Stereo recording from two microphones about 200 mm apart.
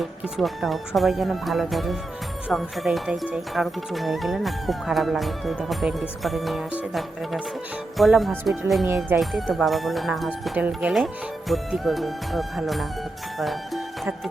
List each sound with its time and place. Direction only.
0.0 s speech: centre (ahead or behind)